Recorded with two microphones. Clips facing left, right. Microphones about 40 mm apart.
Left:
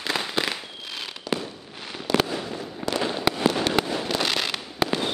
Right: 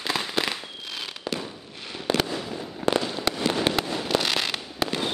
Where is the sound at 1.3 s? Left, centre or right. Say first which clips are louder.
Left 4 dB; right.